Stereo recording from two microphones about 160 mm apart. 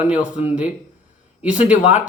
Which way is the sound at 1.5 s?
50° left (ahead or behind).